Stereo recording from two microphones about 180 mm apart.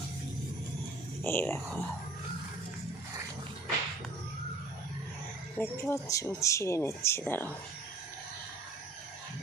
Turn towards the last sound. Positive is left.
turn(degrees=10)  # may be behind; listen again after turning